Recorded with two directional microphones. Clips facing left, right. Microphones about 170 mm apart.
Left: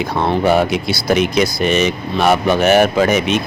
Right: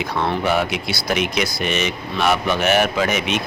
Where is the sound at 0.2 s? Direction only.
35° left (ahead or behind).